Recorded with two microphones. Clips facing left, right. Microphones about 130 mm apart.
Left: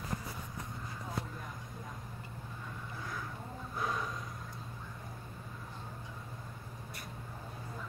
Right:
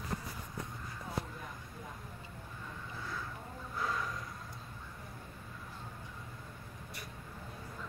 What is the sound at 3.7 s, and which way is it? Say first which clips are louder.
Snort: even; 20° left (ahead or behind).